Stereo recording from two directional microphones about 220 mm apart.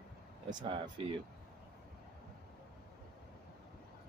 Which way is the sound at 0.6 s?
25° right (ahead or behind).